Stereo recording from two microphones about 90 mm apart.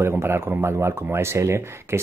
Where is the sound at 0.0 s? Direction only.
25° right (ahead or behind).